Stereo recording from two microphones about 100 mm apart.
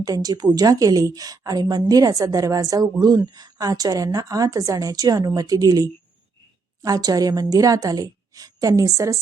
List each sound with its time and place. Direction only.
0.0 s a woman's voice: 40° right (ahead or behind)